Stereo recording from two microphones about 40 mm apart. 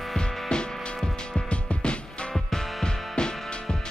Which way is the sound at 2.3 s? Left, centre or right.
Centre.